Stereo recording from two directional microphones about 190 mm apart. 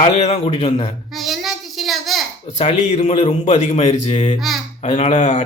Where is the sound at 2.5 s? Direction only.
35° left (ahead or behind).